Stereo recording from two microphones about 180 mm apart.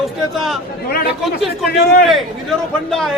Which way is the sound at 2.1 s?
Centre (ahead or behind).